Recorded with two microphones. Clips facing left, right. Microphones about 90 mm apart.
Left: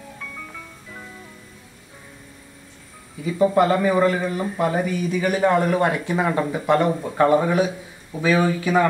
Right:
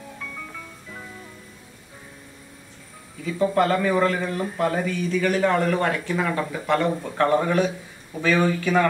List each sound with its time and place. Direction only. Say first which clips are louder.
0.2 s music: even; centre (ahead or behind)
3.3 s speech: left 3 dB; 15° left (ahead or behind)